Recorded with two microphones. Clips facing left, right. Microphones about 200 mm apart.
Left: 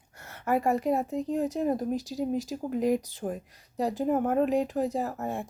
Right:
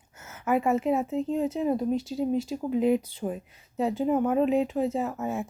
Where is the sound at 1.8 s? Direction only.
Centre (ahead or behind).